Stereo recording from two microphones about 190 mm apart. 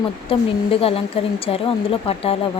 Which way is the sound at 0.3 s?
30° left (ahead or behind).